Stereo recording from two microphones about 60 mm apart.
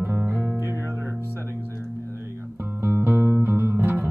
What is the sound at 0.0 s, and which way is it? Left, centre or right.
Guitar, right.